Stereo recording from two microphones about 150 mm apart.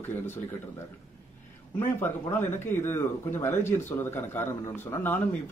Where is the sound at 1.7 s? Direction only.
15° left (ahead or behind).